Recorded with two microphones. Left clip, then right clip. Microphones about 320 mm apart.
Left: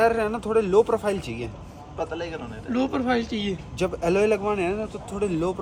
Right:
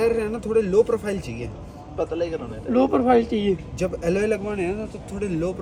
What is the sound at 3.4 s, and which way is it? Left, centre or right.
Speech, centre.